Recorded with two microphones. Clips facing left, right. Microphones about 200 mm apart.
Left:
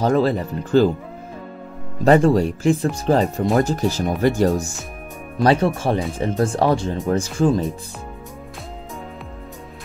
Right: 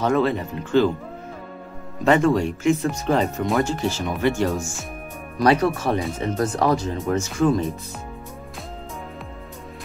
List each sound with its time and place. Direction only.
0.0 s speech: 35° left (ahead or behind)
2.0 s speech: 35° left (ahead or behind)